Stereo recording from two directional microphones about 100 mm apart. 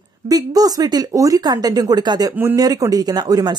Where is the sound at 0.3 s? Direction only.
40° right (ahead or behind).